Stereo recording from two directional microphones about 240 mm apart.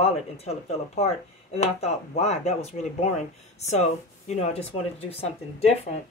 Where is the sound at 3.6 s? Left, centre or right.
Left.